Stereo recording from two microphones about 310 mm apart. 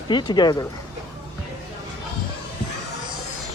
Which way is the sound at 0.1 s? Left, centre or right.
Centre.